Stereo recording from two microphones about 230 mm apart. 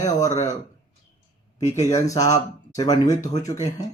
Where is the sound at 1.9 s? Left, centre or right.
Centre.